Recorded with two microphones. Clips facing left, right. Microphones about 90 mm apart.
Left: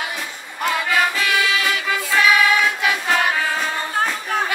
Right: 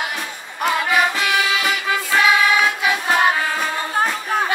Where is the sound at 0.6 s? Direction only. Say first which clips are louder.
Right 2 dB; 20° right (ahead or behind).